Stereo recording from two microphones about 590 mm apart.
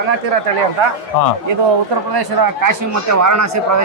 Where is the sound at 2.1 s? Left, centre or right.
Right.